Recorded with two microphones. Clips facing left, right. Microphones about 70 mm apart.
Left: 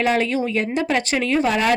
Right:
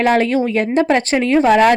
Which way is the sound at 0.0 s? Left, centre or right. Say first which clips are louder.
Right 5 dB; right.